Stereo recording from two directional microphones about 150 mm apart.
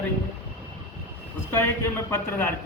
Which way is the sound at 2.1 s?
15° left (ahead or behind).